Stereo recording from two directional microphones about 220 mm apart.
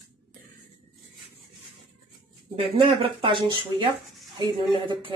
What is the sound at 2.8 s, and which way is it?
Speech, 25° right (ahead or behind).